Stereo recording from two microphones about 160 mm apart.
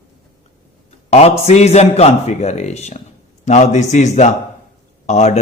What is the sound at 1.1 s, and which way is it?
A man's voice, 40° left (ahead or behind).